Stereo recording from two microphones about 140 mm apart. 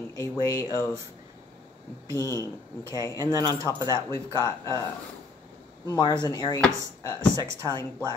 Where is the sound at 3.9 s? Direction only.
25° left (ahead or behind).